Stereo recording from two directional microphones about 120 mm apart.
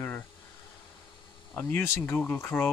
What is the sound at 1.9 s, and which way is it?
Speech, 15° left (ahead or behind).